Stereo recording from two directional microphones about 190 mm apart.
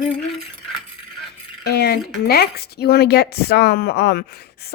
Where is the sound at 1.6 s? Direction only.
60° left (ahead or behind).